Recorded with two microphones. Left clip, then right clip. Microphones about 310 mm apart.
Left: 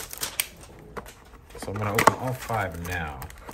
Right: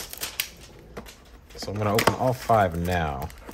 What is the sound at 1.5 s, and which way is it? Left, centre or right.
Speech, centre.